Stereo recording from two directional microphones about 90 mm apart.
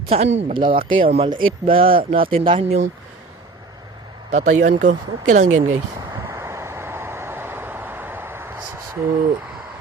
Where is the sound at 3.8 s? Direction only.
50° right (ahead or behind).